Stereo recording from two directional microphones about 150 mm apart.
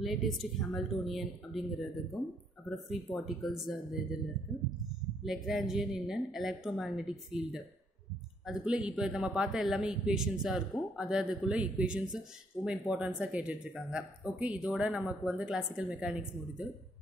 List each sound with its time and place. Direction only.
0.0 s a man's voice: centre (ahead or behind)
4.5 s speech: 20° left (ahead or behind)
5.2 s a man's voice: centre (ahead or behind)